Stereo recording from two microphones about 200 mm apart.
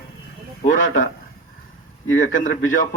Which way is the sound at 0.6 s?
40° left (ahead or behind).